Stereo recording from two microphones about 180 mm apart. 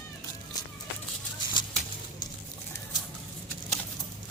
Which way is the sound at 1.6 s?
25° left (ahead or behind).